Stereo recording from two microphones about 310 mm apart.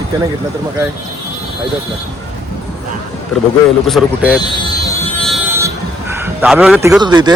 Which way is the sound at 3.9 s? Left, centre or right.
Centre.